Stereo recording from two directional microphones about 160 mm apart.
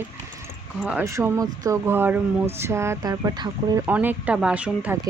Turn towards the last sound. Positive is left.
turn(degrees=-10)  # may be behind; listen again after turning